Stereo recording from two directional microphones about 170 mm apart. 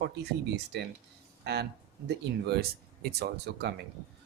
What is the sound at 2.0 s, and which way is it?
Speech, 70° right (ahead or behind).